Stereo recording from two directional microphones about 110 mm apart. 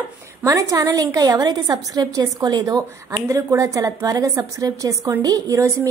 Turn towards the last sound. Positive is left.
turn(degrees=-30)  # may be behind; listen again after turning